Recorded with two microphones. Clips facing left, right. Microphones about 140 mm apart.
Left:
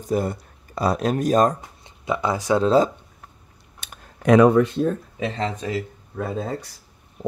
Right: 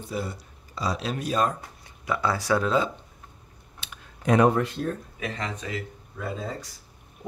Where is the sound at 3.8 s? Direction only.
50° left (ahead or behind).